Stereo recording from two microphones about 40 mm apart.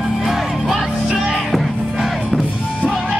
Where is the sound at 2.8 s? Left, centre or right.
Centre.